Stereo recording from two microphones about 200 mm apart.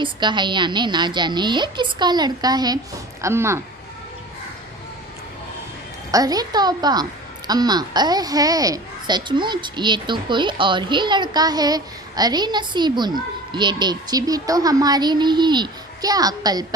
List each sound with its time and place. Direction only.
0.0 s a woman's voice: 20° right (ahead or behind)
6.1 s a woman's voice: 20° right (ahead or behind)